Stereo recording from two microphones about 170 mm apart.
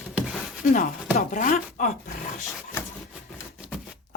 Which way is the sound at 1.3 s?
55° left (ahead or behind).